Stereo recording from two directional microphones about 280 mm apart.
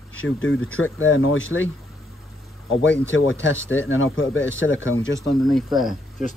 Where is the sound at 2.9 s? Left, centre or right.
Left.